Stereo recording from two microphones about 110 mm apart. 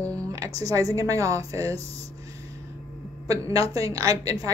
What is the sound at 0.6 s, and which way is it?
A woman's voice, 30° right (ahead or behind).